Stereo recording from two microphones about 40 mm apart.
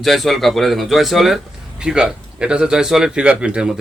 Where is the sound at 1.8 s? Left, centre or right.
Centre.